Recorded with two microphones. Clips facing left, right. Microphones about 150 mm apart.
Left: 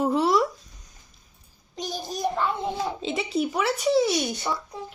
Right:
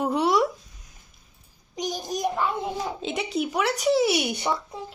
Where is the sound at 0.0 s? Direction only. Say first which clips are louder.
Left 1 dB; centre (ahead or behind).